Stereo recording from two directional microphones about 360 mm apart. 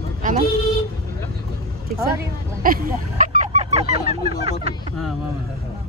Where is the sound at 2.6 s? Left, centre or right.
Right.